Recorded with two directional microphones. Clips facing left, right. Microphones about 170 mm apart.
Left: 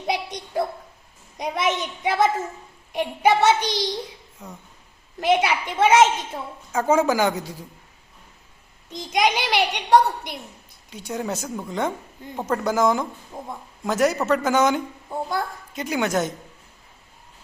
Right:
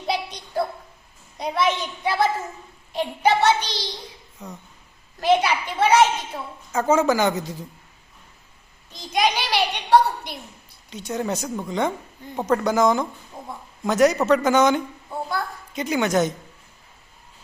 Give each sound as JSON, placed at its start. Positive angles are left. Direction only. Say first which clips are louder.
{"t": 0.1, "sound": "a sound", "louder": "even", "side_deg": 20}
{"t": 1.4, "sound": "a woman's voice", "louder": "right 1 dB", "side_deg": 20}
{"t": 4.4, "sound": "a child's voice", "louder": "right 2 dB", "side_deg": 5}
{"t": 5.2, "sound": "a woman's voice", "louder": "right 1 dB", "side_deg": 20}
{"t": 8.9, "sound": "a woman's voice", "louder": "left 1 dB", "side_deg": 20}
{"t": 10.8, "sound": "speech", "louder": "right 2 dB", "side_deg": 10}
{"t": 13.3, "sound": "a woman's voice", "louder": "left 3 dB", "side_deg": 20}
{"t": 13.8, "sound": "speech", "louder": "right 3 dB", "side_deg": 5}
{"t": 15.1, "sound": "speech", "louder": "left 2 dB", "side_deg": 20}
{"t": 15.7, "sound": "speech", "louder": "right 2 dB", "side_deg": 5}